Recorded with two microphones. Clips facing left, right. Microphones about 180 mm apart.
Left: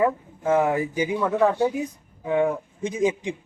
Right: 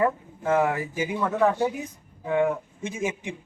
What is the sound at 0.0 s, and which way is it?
Speech, 20° left (ahead or behind).